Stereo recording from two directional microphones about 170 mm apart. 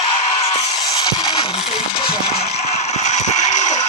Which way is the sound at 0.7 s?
25° left (ahead or behind).